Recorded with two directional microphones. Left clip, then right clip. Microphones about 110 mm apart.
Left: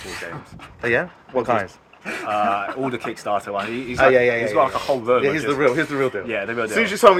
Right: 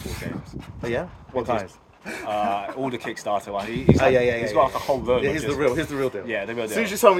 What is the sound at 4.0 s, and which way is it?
A man's voice, centre (ahead or behind).